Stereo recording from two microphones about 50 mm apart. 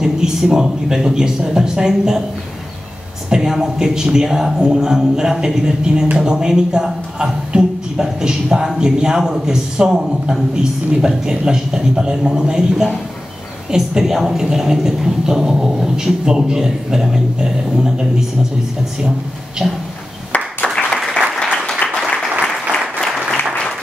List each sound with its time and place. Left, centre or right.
0.0 s a man's voice: centre
3.3 s a man's voice: centre
19.6 s a sound: centre
20.3 s applause: left
21.8 s applause: centre